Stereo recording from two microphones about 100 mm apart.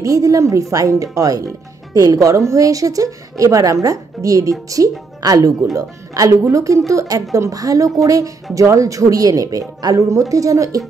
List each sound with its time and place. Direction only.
0.0 s a woman's voice: 35° right (ahead or behind)